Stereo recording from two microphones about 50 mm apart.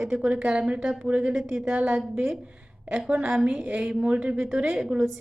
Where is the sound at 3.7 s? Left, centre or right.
Right.